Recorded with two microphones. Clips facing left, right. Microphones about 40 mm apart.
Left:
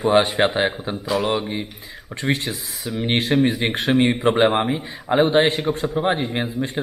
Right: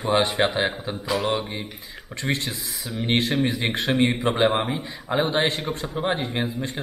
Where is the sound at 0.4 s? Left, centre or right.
Centre.